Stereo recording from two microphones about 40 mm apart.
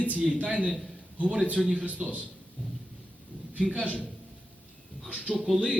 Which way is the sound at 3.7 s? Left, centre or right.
Left.